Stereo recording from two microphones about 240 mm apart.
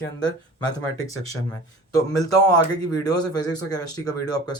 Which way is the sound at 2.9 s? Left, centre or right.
Centre.